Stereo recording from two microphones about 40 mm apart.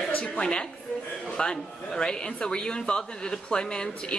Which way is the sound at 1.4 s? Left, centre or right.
Centre.